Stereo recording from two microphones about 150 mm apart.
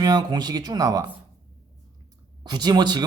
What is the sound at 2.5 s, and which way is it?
Speech, 30° right (ahead or behind).